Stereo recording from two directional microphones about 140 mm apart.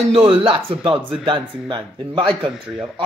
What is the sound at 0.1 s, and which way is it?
Speech, 40° right (ahead or behind).